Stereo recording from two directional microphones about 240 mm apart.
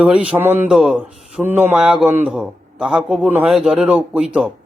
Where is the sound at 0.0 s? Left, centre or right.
Centre.